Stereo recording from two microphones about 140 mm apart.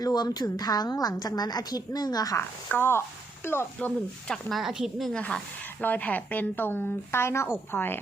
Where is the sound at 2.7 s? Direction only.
15° left (ahead or behind).